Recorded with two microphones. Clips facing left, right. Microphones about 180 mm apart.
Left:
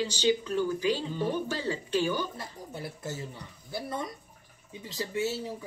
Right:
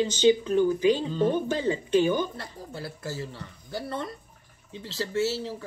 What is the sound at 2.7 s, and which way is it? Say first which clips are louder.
Speech: right 3 dB; 20° left (ahead or behind).